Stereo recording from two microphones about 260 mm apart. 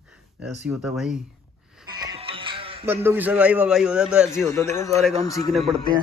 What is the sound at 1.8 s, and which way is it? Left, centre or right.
Music, centre.